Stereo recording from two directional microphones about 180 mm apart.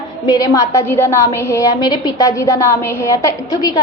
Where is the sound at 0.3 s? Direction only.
20° left (ahead or behind).